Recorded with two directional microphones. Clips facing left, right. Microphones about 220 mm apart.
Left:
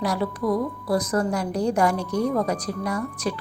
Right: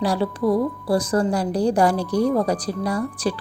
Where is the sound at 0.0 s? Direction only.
30° right (ahead or behind).